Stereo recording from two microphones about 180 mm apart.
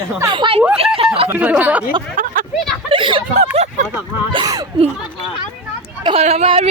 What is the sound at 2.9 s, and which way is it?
Speech, 30° right (ahead or behind).